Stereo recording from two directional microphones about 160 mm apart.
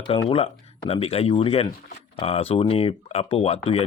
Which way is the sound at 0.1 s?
35° left (ahead or behind).